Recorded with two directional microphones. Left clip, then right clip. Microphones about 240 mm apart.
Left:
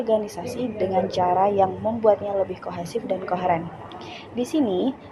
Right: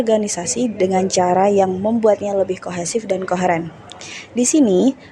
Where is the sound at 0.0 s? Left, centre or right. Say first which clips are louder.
Right 5 dB; right.